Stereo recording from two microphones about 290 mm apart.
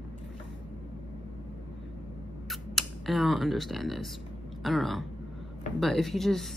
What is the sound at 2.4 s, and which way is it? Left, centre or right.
Speech, centre.